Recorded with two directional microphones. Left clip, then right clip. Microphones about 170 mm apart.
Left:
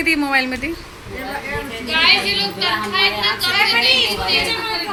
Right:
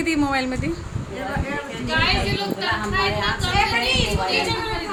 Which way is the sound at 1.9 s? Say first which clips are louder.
Left 7 dB; 60° right (ahead or behind).